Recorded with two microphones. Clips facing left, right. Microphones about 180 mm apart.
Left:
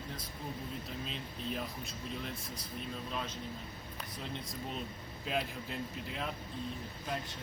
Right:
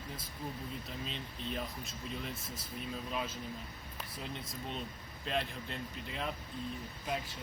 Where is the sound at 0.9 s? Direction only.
Centre (ahead or behind).